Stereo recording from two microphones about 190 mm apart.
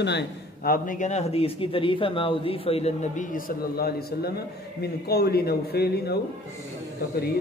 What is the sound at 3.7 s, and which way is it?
A man's voice, 55° left (ahead or behind).